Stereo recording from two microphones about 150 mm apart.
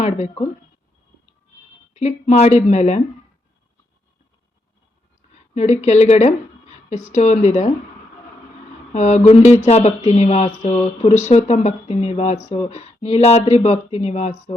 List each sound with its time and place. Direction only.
1.9 s speech: 50° left (ahead or behind)
5.3 s a woman's voice: 50° left (ahead or behind)
8.9 s speech: 50° left (ahead or behind)